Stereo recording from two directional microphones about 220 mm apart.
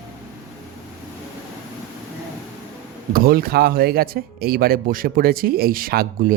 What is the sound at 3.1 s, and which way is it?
Speech, 45° right (ahead or behind).